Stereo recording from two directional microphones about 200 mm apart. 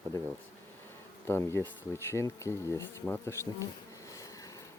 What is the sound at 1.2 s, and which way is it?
Speech, 15° left (ahead or behind).